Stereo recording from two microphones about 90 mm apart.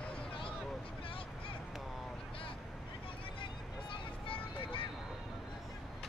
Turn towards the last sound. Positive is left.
turn(degrees=80)